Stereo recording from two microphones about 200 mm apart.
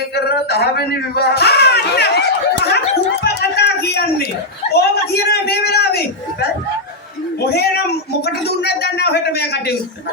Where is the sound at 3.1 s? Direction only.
55° left (ahead or behind).